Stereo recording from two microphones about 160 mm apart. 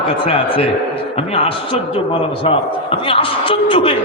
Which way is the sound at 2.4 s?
35° left (ahead or behind).